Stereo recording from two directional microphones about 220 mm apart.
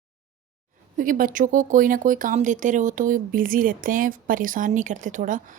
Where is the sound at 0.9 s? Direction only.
40° right (ahead or behind).